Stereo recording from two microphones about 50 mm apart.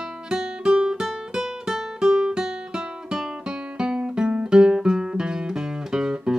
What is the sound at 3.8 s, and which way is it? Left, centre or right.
Guitar, centre.